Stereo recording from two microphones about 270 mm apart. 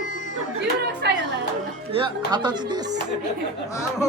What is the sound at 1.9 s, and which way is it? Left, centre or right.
Music, centre.